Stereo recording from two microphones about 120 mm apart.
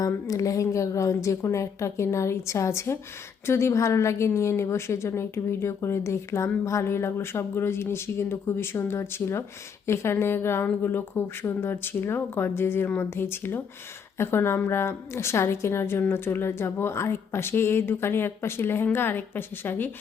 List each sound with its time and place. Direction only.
0.0 s a woman's voice: 30° left (ahead or behind)